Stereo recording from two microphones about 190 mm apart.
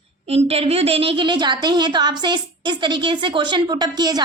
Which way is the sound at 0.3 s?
30° right (ahead or behind).